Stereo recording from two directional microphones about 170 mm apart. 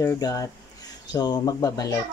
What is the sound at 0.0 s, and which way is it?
A child's voice, 20° left (ahead or behind).